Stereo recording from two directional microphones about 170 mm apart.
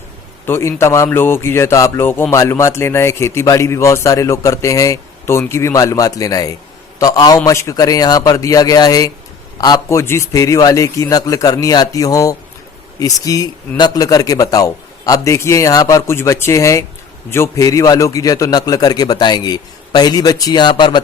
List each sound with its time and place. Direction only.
0.4 s a man's voice: 15° left (ahead or behind)